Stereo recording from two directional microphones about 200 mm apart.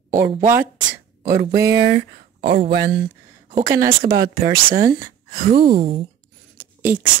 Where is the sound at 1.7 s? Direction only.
60° right (ahead or behind).